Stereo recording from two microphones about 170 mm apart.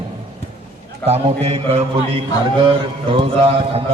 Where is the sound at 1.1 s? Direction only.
35° right (ahead or behind).